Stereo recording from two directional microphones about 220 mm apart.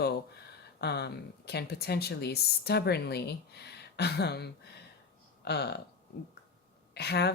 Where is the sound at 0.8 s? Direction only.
50° left (ahead or behind).